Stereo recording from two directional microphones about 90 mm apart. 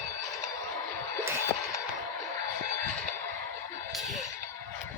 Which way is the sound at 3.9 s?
Centre (ahead or behind).